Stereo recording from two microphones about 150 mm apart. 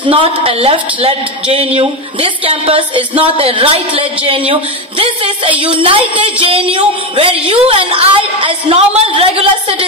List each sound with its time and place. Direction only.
0.0 s speech: 35° right (ahead or behind)